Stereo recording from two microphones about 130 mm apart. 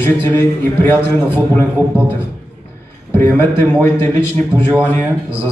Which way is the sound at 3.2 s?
15° left (ahead or behind).